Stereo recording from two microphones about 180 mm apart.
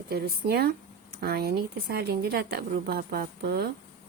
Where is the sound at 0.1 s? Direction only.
60° right (ahead or behind).